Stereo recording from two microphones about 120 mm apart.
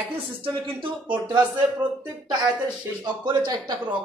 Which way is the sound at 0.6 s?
45° right (ahead or behind).